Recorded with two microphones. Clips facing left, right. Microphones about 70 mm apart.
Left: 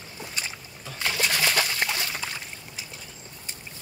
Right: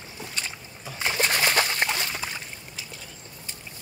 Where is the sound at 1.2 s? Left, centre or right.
Right.